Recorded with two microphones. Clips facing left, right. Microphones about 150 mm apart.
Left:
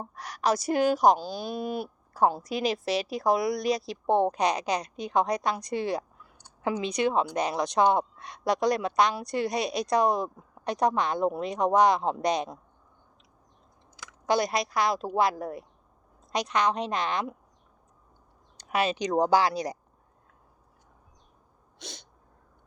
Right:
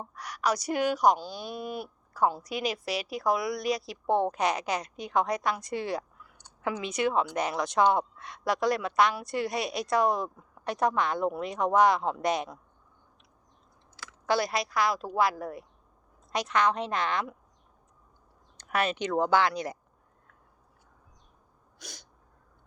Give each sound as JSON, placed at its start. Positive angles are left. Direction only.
{"t": 0.2, "sound": "a woman's voice", "side_deg": 25}
{"t": 13.9, "sound": "a woman's voice", "side_deg": 15}
{"t": 18.7, "sound": "speech", "side_deg": 25}
{"t": 19.2, "sound": "a woman's voice", "side_deg": 35}
{"t": 21.8, "sound": "sneeze", "side_deg": 25}